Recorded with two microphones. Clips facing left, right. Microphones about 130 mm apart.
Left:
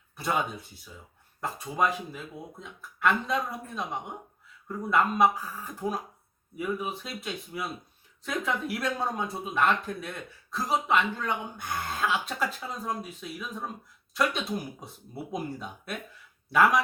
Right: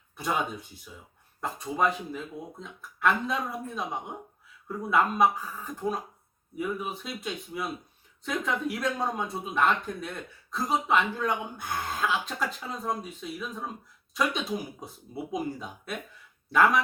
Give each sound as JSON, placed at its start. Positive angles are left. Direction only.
{"t": 0.2, "sound": "speech", "side_deg": 0}
{"t": 4.7, "sound": "speech", "side_deg": -5}